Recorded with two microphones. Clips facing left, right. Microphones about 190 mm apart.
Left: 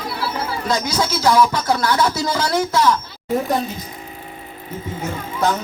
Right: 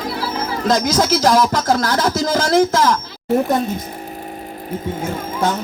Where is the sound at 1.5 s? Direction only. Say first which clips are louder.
Right 3 dB; 90° right.